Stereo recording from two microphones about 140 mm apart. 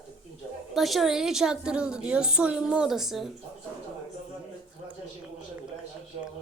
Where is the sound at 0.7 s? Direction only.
Centre (ahead or behind).